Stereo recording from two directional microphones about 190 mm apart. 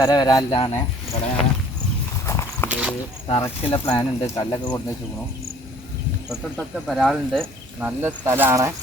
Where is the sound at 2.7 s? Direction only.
5° right (ahead or behind).